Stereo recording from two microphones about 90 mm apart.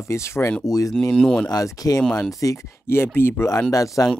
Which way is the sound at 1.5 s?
40° left (ahead or behind).